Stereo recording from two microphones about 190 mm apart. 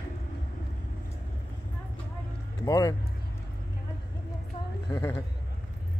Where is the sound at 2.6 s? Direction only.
20° left (ahead or behind).